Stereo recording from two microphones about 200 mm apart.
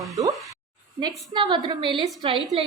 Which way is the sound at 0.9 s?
20° right (ahead or behind).